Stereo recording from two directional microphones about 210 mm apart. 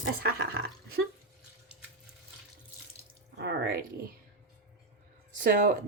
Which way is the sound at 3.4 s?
50° right (ahead or behind).